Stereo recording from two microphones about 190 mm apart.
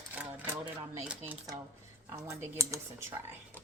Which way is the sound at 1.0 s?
10° right (ahead or behind).